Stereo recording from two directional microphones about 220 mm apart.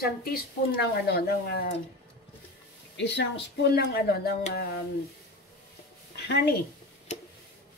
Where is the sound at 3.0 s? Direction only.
50° left (ahead or behind).